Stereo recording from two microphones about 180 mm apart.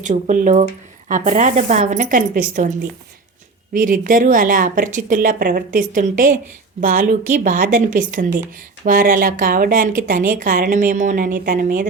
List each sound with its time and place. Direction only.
0.0 s a woman's voice: 45° right (ahead or behind)
3.8 s a woman's voice: 50° right (ahead or behind)